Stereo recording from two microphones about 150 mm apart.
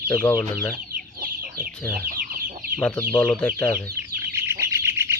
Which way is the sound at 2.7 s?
10° left (ahead or behind).